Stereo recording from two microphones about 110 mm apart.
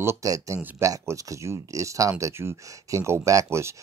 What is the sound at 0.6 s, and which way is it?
Speech, 15° right (ahead or behind).